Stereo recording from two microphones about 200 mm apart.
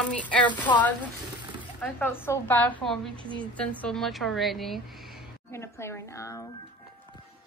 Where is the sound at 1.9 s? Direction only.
10° left (ahead or behind).